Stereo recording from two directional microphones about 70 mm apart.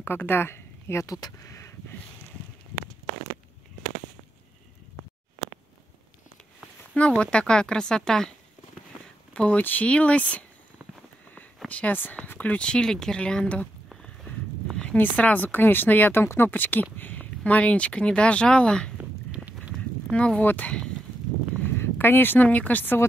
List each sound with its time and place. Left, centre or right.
0.0 s speech: left
1.0 s speech: left
6.9 s speech: centre
9.3 s speech: centre
11.3 s a sound: left
12.3 s speech: left
14.0 s a sound: centre
15.0 s speech: left
18.9 s walk: right
20.1 s speech: centre
21.7 s speech: left